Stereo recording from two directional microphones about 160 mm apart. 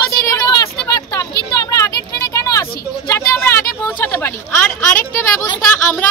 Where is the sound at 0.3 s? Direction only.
25° left (ahead or behind).